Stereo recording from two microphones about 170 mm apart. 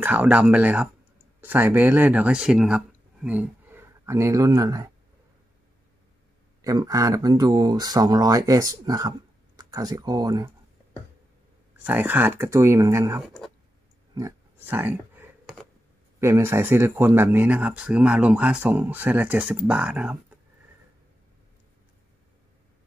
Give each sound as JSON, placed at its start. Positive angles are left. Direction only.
{"t": 0.0, "sound": "speech", "side_deg": -10}
{"t": 6.6, "sound": "speech", "side_deg": -20}
{"t": 11.8, "sound": "speech", "side_deg": -10}
{"t": 14.1, "sound": "a sound", "side_deg": -15}
{"t": 16.2, "sound": "speech", "side_deg": -15}